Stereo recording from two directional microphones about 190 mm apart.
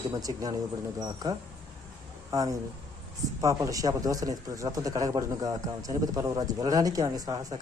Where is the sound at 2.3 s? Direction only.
20° right (ahead or behind).